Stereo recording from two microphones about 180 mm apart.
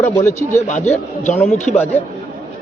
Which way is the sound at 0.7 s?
40° left (ahead or behind).